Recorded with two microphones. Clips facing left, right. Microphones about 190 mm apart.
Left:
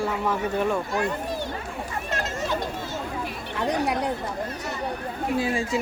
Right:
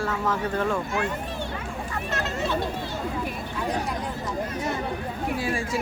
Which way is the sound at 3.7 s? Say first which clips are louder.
Left 5 dB; 70° left (ahead or behind).